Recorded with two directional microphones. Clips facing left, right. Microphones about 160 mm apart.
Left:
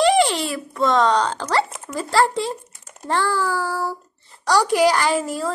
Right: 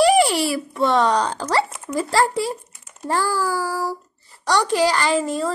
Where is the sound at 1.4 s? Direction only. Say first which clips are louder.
Even; 5° right (ahead or behind).